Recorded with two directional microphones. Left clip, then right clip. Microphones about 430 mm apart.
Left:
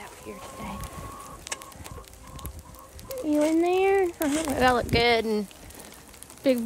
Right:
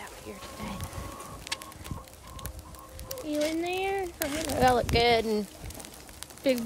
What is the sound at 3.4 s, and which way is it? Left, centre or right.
A child's voice, centre.